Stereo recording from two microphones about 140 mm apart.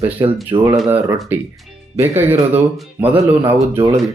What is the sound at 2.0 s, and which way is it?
Speech, 15° right (ahead or behind).